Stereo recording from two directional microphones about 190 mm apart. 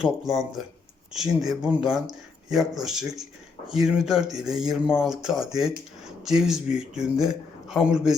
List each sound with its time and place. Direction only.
0.0 s speech: centre (ahead or behind)